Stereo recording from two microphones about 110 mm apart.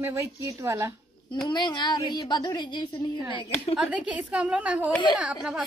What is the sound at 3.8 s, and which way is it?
A woman's voice, 10° right (ahead or behind).